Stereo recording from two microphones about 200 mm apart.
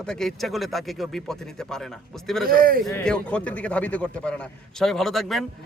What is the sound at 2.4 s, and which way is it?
Speech, 45° right (ahead or behind).